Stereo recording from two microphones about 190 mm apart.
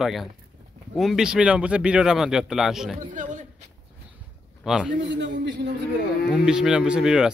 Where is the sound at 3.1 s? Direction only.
40° right (ahead or behind).